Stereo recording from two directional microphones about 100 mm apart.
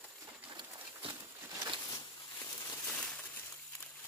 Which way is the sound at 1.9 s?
40° left (ahead or behind).